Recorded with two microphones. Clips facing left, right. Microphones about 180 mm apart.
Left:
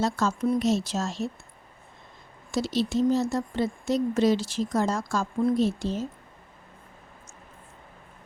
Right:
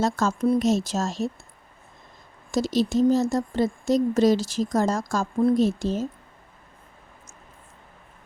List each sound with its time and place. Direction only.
0.0 s speech: 45° right (ahead or behind)
2.5 s speech: 45° right (ahead or behind)